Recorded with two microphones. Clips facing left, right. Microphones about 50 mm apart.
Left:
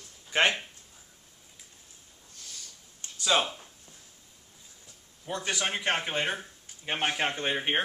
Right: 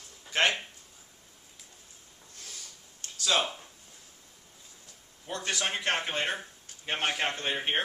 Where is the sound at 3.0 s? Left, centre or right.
Left.